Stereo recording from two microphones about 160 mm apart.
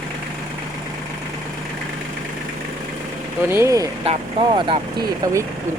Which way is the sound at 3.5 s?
20° right (ahead or behind).